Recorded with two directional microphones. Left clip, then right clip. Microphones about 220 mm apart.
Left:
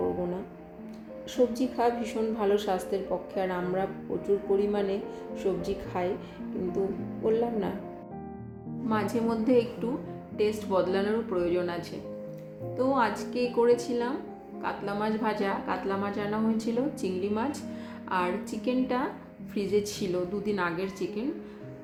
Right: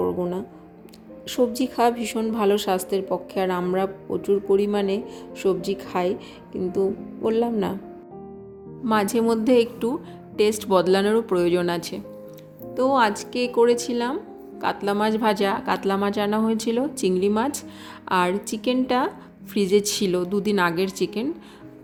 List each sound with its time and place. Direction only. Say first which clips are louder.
1.3 s a woman's voice: right 4 dB; 50° right (ahead or behind)
7.3 s a woman's voice: right 5 dB; 45° right (ahead or behind)
8.9 s a woman's voice: right 8 dB; 50° right (ahead or behind)